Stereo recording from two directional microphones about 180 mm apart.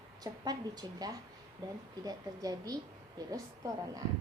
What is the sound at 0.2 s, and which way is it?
A woman's voice, 20° right (ahead or behind).